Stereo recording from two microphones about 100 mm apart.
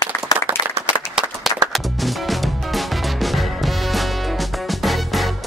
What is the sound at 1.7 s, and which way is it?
Music, centre (ahead or behind).